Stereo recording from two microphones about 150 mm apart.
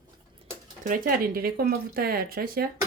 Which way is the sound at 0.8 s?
65° right (ahead or behind).